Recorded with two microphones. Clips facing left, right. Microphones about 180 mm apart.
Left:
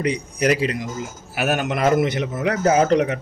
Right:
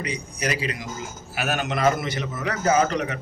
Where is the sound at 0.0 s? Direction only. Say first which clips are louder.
Left 8 dB; 60° left (ahead or behind).